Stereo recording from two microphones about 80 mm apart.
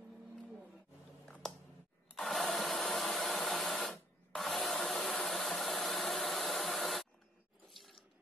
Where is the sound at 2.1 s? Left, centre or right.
Centre.